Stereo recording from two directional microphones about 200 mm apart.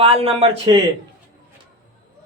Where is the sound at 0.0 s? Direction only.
30° right (ahead or behind).